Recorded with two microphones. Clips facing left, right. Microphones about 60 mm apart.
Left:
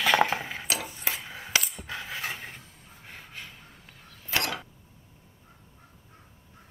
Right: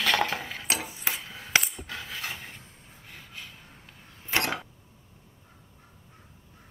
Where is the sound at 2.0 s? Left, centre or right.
Left.